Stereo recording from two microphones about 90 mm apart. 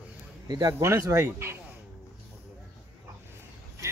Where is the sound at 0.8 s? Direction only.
30° right (ahead or behind).